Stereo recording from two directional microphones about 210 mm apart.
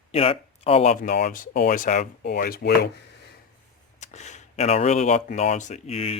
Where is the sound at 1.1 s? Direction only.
45° left (ahead or behind).